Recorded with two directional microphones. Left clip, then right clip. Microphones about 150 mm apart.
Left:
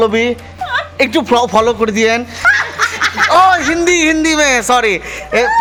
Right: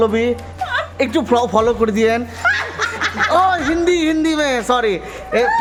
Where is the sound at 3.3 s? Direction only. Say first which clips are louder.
Left 6 dB; 5° left (ahead or behind).